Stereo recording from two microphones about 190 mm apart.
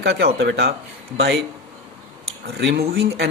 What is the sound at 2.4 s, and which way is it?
Speech, 60° right (ahead or behind).